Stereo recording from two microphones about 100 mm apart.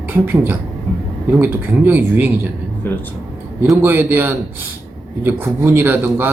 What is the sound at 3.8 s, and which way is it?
A man's voice, 20° right (ahead or behind).